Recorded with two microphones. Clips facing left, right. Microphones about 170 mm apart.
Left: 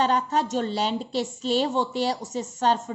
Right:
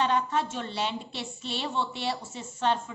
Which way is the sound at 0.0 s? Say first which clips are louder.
Left 3 dB; 40° left (ahead or behind).